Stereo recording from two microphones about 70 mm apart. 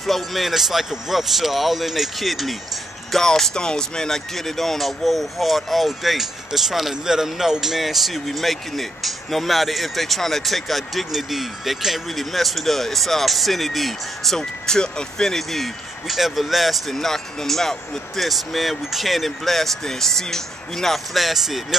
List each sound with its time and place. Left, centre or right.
0.0 s speech: centre